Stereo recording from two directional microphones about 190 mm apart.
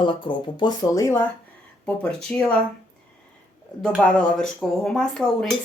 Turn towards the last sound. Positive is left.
turn(degrees=0)  # may be behind; listen again after turning